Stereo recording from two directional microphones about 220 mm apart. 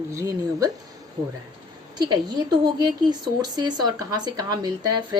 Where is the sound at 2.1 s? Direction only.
20° right (ahead or behind).